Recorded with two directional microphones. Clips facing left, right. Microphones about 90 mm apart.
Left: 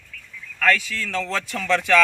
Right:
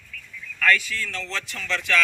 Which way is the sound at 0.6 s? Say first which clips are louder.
Left 1 dB; 85° left.